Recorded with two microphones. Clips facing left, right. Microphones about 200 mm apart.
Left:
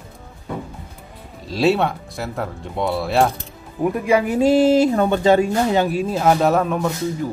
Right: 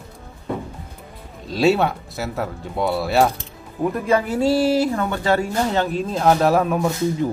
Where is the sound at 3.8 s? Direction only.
10° left (ahead or behind); by 6.9 s 5° right (ahead or behind).